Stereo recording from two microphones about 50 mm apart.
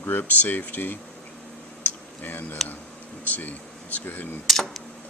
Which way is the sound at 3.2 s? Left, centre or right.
Left.